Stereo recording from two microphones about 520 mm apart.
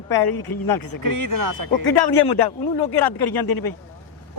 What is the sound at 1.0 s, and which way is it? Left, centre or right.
Speech, right.